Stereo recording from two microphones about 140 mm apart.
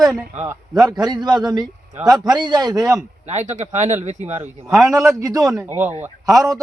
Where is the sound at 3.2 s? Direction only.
55° right (ahead or behind).